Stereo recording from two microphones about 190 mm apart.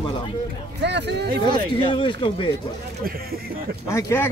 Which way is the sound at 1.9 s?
25° left (ahead or behind).